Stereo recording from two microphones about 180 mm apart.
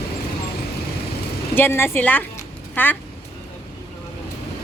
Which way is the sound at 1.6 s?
10° left (ahead or behind).